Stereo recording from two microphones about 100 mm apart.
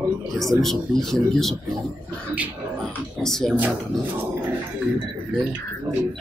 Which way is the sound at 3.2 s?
5° left (ahead or behind).